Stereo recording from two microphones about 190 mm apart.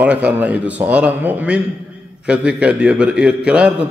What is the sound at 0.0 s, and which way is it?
A man's voice, 5° right (ahead or behind).